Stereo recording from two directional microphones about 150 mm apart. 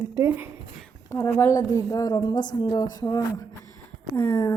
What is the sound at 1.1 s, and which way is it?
A woman's voice, 15° left (ahead or behind).